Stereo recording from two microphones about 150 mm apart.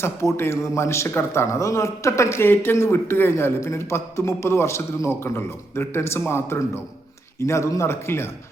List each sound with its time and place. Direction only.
0.0 s speech: 20° left (ahead or behind)